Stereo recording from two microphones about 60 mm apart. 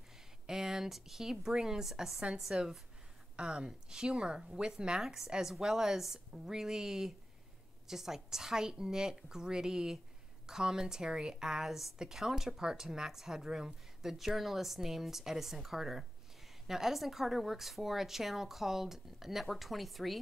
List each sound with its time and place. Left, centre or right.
0.5 s a woman's voice: centre